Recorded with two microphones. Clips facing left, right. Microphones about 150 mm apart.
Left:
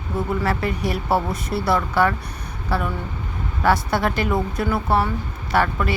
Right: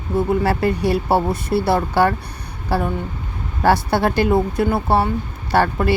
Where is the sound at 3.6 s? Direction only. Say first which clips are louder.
Right 3 dB; 30° right (ahead or behind).